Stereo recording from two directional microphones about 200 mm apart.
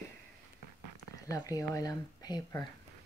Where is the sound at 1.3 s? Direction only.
15° left (ahead or behind).